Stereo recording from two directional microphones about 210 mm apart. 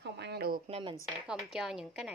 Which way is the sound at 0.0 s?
50° right (ahead or behind).